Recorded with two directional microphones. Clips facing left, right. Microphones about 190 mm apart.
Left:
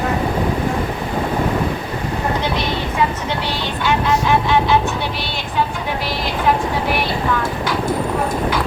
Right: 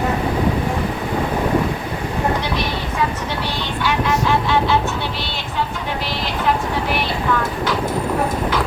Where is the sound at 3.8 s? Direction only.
15° left (ahead or behind).